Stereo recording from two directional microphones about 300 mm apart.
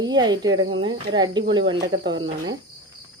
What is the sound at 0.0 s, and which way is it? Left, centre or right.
Speech, centre.